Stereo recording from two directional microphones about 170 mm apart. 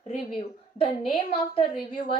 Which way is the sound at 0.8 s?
35° left (ahead or behind).